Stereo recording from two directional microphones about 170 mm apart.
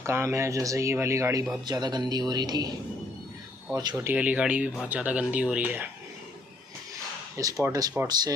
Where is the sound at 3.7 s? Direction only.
20° right (ahead or behind).